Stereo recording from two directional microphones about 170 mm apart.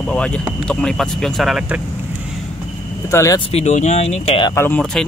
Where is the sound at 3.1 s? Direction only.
15° left (ahead or behind).